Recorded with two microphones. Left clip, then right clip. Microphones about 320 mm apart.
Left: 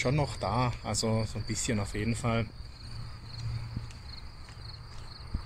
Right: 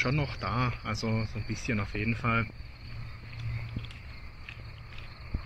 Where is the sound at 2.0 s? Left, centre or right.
Left.